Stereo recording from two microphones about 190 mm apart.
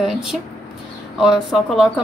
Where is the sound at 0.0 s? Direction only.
Centre (ahead or behind).